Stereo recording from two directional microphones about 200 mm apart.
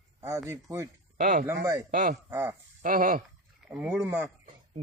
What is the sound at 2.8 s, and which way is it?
Speech, 45° right (ahead or behind).